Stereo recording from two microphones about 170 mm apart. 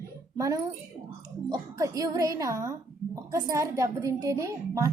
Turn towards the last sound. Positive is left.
turn(degrees=-20)  # may be behind; listen again after turning